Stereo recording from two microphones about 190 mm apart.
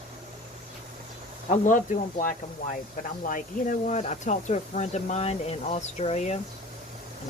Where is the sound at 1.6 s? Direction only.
45° left (ahead or behind).